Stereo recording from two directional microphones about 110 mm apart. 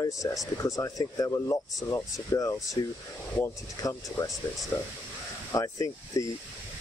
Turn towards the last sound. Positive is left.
turn(degrees=30)  # may be behind; listen again after turning